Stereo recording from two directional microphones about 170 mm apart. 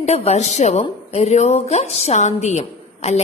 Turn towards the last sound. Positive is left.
turn(degrees=40)  # may be behind; listen again after turning